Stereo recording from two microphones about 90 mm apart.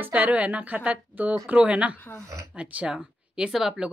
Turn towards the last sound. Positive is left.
turn(degrees=-5)  # may be behind; listen again after turning